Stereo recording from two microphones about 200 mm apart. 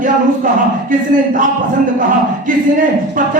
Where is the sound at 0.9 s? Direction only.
40° right (ahead or behind).